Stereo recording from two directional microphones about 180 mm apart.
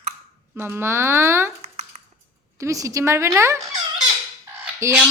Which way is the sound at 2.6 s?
15° right (ahead or behind).